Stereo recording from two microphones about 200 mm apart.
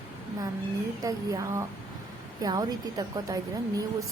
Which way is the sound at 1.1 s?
15° right (ahead or behind).